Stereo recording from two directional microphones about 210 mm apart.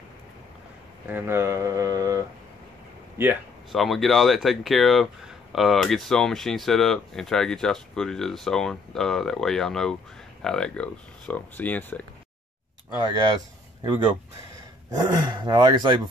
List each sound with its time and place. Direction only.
1.0 s speech: 10° right (ahead or behind)
3.2 s speech: 5° right (ahead or behind)
13.0 s speech: 20° right (ahead or behind)
14.9 s speech: 20° right (ahead or behind)